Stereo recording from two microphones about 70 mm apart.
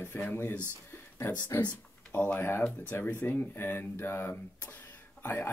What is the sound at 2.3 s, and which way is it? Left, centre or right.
Speech, left.